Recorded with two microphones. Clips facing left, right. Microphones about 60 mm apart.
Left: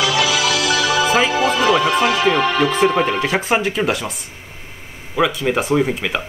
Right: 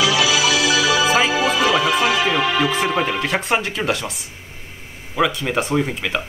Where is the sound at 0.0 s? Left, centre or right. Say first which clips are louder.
Even; left.